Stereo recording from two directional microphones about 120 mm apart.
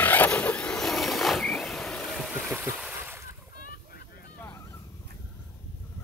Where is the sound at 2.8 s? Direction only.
15° right (ahead or behind).